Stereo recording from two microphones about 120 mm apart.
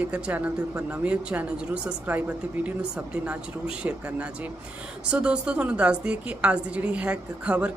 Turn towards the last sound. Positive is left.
turn(degrees=-10)  # may be behind; listen again after turning